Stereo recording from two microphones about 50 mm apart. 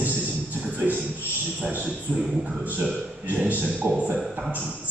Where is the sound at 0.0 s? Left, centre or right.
Right.